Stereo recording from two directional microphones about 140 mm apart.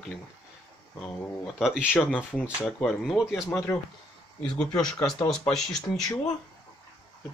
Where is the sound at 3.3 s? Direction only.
20° left (ahead or behind).